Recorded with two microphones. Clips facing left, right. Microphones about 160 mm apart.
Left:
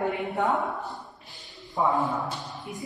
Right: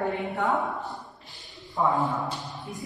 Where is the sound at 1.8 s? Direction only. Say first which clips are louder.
Even; 15° left (ahead or behind).